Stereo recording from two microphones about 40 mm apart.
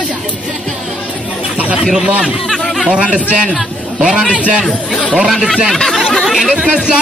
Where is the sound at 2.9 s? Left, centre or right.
Right.